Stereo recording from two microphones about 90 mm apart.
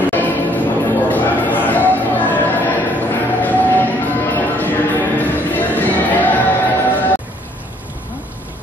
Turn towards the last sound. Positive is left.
turn(degrees=20)  # may be behind; listen again after turning